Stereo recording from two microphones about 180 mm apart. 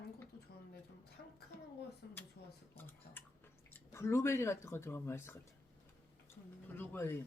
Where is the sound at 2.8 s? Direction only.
10° left (ahead or behind).